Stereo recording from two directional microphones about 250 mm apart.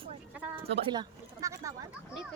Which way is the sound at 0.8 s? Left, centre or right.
Centre.